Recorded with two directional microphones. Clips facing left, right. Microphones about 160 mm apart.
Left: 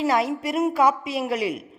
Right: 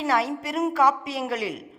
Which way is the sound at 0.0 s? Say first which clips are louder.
Left 2 dB; 15° left (ahead or behind).